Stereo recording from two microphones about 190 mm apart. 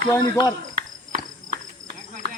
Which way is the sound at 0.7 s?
45° right (ahead or behind).